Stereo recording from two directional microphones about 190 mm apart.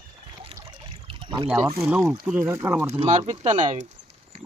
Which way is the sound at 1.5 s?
15° right (ahead or behind).